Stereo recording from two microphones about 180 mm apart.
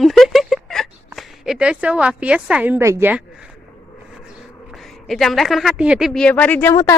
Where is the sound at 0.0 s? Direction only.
Centre (ahead or behind).